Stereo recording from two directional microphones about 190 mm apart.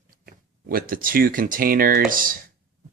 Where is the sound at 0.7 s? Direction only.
50° right (ahead or behind).